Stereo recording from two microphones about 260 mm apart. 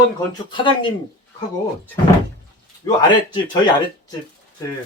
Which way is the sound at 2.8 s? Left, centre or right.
Centre.